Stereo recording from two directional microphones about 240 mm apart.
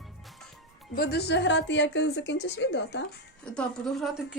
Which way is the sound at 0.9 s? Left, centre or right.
Left.